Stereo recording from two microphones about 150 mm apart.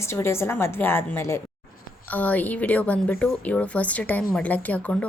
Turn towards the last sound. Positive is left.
turn(degrees=10)  # may be behind; listen again after turning